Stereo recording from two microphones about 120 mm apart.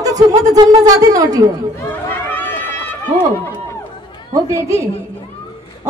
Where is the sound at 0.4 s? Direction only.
30° right (ahead or behind).